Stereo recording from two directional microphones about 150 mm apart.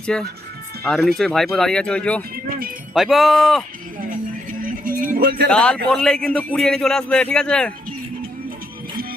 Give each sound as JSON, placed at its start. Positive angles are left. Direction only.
{"t": 0.1, "sound": "a man's voice", "side_deg": 5}
{"t": 2.5, "sound": "speech", "side_deg": -70}
{"t": 2.9, "sound": "a man's voice", "side_deg": 0}
{"t": 4.6, "sound": "music", "side_deg": -65}
{"t": 5.1, "sound": "speech", "side_deg": -75}
{"t": 5.5, "sound": "a man's voice", "side_deg": 5}